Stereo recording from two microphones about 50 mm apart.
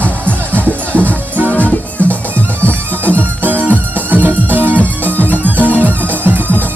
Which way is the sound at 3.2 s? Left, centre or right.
Right.